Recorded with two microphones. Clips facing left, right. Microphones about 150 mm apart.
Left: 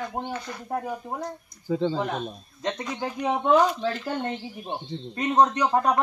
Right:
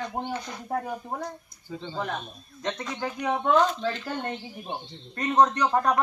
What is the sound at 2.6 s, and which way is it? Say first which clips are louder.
Speech: left 2 dB; 15° left (ahead or behind).